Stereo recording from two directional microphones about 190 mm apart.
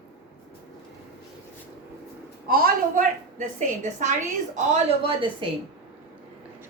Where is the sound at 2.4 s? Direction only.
50° right (ahead or behind).